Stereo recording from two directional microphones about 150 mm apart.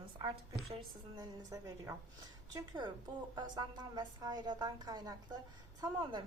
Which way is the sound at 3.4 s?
30° right (ahead or behind).